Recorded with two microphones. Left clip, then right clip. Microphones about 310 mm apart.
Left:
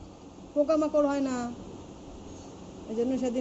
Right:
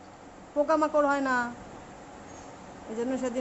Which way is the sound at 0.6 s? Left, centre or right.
Centre.